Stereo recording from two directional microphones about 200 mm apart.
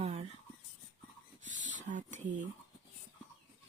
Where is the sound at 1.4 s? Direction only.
40° right (ahead or behind).